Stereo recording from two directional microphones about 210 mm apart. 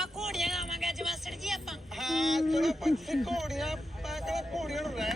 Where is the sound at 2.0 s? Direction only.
Centre (ahead or behind).